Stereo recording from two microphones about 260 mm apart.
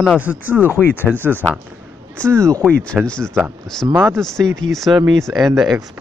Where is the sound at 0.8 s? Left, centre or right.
Centre.